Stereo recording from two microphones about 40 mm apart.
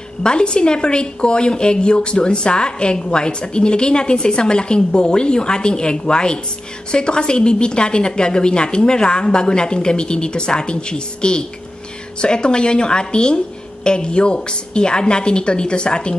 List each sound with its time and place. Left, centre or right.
0.2 s a woman's voice: left